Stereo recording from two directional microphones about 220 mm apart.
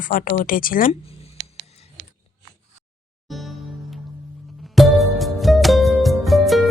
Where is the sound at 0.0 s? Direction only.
40° left (ahead or behind).